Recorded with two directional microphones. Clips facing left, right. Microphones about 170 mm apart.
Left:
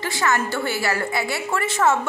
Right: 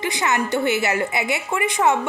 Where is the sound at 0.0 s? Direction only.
20° right (ahead or behind).